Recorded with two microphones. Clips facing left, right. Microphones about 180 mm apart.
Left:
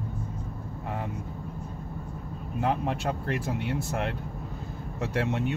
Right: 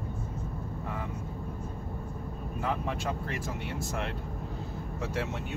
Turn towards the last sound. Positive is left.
turn(degrees=65)  # may be behind; listen again after turning